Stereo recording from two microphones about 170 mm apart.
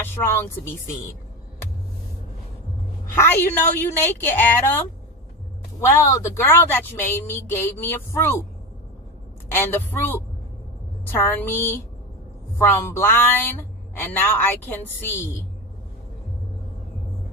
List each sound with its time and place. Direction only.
3.2 s a woman's voice: 10° left (ahead or behind)
5.8 s a woman's voice: 15° left (ahead or behind)
9.5 s a woman's voice: 15° left (ahead or behind)